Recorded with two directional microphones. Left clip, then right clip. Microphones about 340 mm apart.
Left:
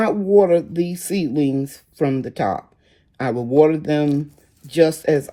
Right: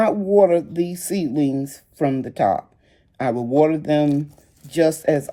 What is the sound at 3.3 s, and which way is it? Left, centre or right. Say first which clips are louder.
Speech: left 3 dB; left.